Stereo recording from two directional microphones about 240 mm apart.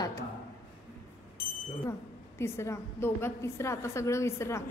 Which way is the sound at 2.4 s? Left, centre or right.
Centre.